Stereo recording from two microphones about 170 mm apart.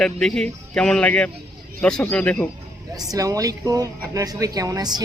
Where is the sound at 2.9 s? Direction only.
20° right (ahead or behind).